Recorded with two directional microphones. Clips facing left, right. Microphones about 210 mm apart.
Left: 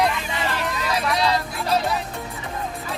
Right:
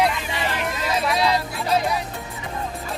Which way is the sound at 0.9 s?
25° right (ahead or behind).